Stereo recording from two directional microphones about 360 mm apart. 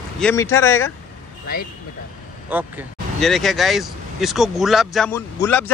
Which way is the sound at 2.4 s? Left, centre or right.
Centre.